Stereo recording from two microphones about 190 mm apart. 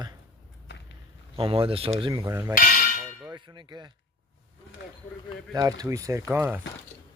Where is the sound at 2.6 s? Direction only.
50° left (ahead or behind).